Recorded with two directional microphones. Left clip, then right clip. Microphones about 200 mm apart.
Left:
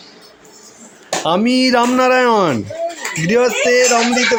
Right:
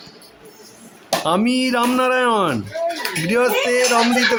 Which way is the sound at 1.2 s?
5° left (ahead or behind).